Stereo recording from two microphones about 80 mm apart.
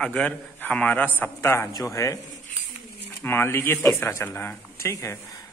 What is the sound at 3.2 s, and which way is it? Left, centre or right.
A man's voice, left.